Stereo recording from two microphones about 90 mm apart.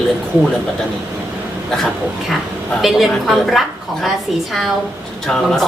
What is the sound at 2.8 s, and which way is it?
Speech, centre (ahead or behind).